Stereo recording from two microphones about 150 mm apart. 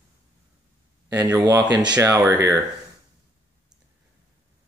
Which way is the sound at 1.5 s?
10° right (ahead or behind).